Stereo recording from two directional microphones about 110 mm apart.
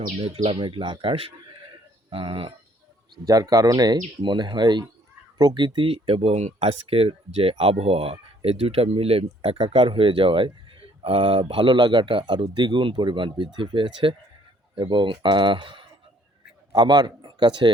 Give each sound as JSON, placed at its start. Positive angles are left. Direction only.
{"t": 0.2, "sound": "speech", "side_deg": -50}
{"t": 3.2, "sound": "speech", "side_deg": -35}